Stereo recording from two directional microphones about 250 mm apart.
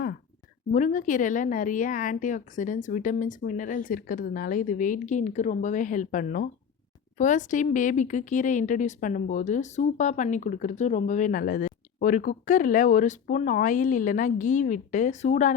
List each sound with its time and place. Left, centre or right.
0.7 s a woman's voice: left